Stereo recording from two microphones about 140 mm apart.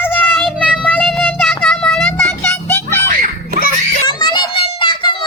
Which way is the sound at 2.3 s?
15° left (ahead or behind).